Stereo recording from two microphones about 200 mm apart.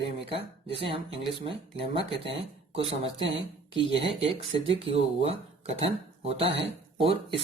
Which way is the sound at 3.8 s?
65° right (ahead or behind).